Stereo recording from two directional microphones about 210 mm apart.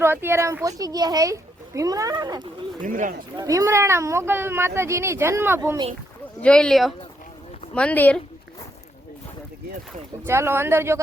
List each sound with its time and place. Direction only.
0.0 s speech: 10° right (ahead or behind)
2.8 s speech: 40° right (ahead or behind)
3.3 s speech: 15° right (ahead or behind)
6.4 s speech: 5° left (ahead or behind)
10.2 s speech: 10° right (ahead or behind)